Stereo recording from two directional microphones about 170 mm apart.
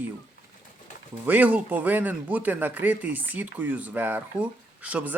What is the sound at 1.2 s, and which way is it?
Speech, 10° right (ahead or behind).